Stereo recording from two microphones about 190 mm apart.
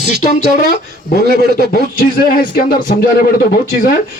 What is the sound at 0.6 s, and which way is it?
Speech, 45° left (ahead or behind).